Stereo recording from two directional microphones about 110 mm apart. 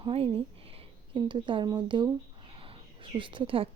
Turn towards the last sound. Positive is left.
turn(degrees=-50)  # may be behind; listen again after turning